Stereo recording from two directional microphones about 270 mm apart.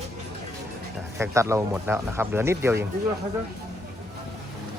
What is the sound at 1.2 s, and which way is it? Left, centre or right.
Speech, centre.